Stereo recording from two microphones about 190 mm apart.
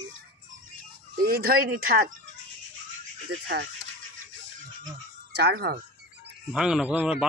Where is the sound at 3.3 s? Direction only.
65° right (ahead or behind).